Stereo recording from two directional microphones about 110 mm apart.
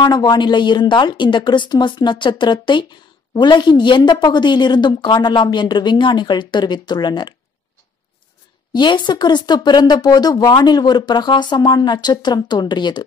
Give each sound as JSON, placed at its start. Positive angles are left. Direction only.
{"t": 0.0, "sound": "a woman's voice", "side_deg": 40}
{"t": 8.7, "sound": "speech", "side_deg": 45}